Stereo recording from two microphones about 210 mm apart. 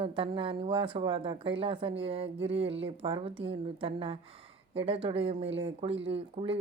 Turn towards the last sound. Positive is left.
turn(degrees=-25)  # may be behind; listen again after turning